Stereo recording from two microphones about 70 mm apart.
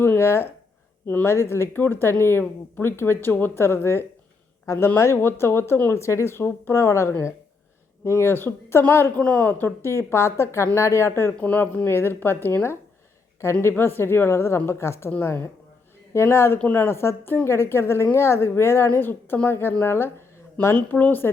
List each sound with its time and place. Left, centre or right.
0.0 s speech: left
4.6 s speech: left
4.9 s speech: left
11.3 s speech: left
20.7 s a woman's voice: left